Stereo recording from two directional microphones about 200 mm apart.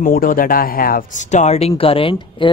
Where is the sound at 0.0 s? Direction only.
45° left (ahead or behind).